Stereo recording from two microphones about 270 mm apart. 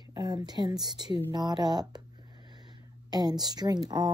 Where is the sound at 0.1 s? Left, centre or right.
Centre.